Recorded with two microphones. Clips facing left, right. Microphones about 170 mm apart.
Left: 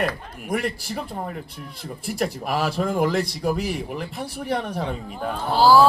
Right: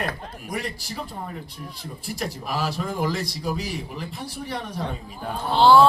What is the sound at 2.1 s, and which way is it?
A man's voice, 60° left (ahead or behind).